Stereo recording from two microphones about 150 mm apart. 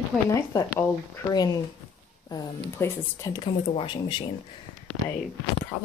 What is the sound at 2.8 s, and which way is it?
Speech, 20° left (ahead or behind).